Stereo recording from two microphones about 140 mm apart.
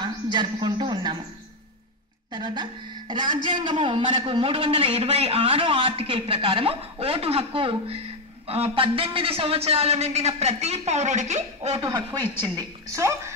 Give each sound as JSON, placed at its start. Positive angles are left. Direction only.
{"t": 0.0, "sound": "a sound", "side_deg": -30}
{"t": 2.3, "sound": "a man's voice", "side_deg": -30}
{"t": 12.5, "sound": "a woman's voice", "side_deg": -20}